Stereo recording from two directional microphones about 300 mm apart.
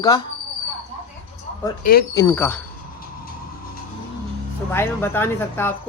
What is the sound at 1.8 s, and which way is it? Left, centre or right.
Speech, left.